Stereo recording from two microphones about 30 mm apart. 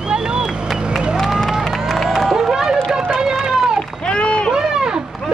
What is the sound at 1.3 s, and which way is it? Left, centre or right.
Run, right.